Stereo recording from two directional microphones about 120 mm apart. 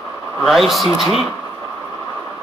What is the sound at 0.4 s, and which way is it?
Speech, centre (ahead or behind).